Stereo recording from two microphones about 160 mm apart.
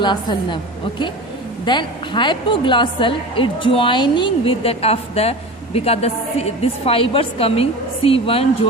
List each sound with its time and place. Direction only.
0.0 s a woman's voice: 30° left (ahead or behind)